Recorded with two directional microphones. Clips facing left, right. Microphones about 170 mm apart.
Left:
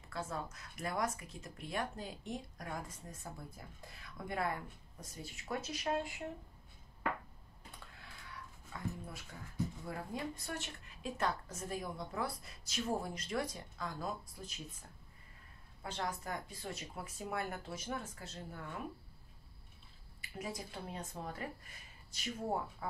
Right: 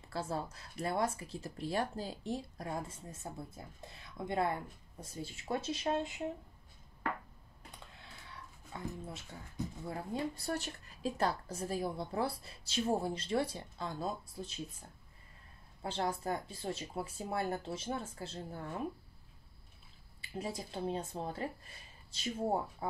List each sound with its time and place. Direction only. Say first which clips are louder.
0.1 s speech: right 4 dB; 30° right (ahead or behind)
8.7 s speech: right 1 dB; 25° right (ahead or behind)
15.8 s speech: right 5 dB; 30° right (ahead or behind)
20.2 s speech: right 3 dB; 30° right (ahead or behind)